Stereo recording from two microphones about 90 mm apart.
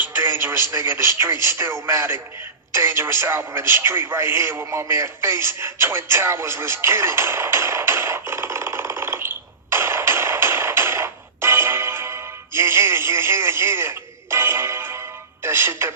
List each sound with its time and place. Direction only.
0.0 s speech: 25° right (ahead or behind)
2.7 s radio: 30° right (ahead or behind)
15.4 s music: 30° right (ahead or behind)